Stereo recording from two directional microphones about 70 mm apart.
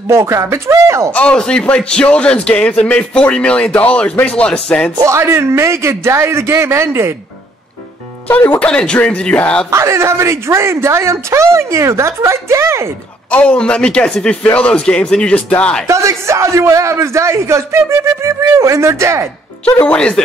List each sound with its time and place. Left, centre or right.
0.1 s speech: right
1.1 s speech: centre
5.0 s a man's voice: right
8.3 s speech: left
9.7 s speech: right
13.3 s speech: centre
15.9 s speech: right
19.6 s speech: centre